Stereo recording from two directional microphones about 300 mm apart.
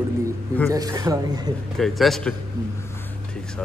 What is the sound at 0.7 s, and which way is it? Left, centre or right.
Speech, centre.